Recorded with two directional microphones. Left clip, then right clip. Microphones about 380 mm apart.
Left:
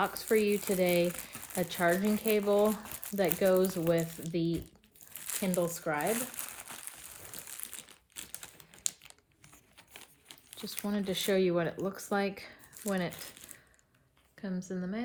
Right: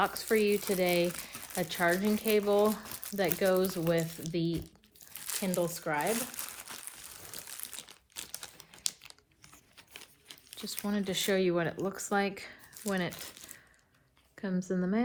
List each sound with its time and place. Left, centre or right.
0.0 s speech: centre
1.3 s crumpling: centre
1.7 s speech: centre
2.8 s speech: centre
3.2 s speech: centre
5.5 s speech: centre
6.1 s a sound: centre
10.7 s speech: centre
13.3 s coin: centre
14.3 s a woman's voice: centre